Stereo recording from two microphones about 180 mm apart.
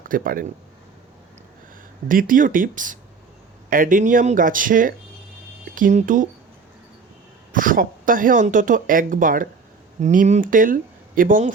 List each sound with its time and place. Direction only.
0.0 s speech: 50° right (ahead or behind)
2.0 s speech: 50° right (ahead or behind)
7.5 s speech: 50° right (ahead or behind)